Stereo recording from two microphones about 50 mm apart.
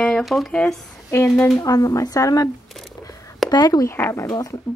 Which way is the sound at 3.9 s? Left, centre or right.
Left.